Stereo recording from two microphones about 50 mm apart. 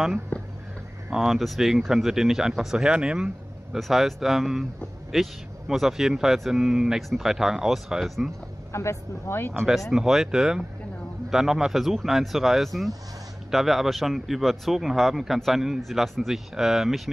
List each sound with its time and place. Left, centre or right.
0.3 s a sound: left
1.2 s speech: centre
3.7 s a man's voice: centre
7.1 s a man's voice: centre
8.7 s speech: left
9.9 s a man's voice: centre